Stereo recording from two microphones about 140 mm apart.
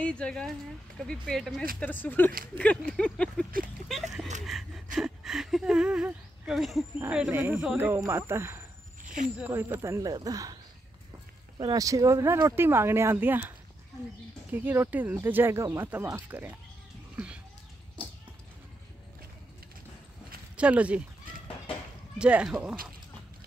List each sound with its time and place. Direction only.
0.0 s speech: 5° left (ahead or behind)
1.8 s a sound: 15° left (ahead or behind)
4.5 s gasp: centre (ahead or behind)
4.9 s a sound: 5° right (ahead or behind)
7.1 s speech: 10° right (ahead or behind)
9.0 s snake: 70° right (ahead or behind)
9.4 s speech: 15° right (ahead or behind)
14.5 s speech: 15° right (ahead or behind)
20.5 s speech: 10° right (ahead or behind)
22.2 s speech: 5° right (ahead or behind)